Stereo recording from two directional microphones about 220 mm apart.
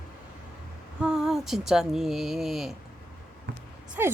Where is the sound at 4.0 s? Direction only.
10° right (ahead or behind).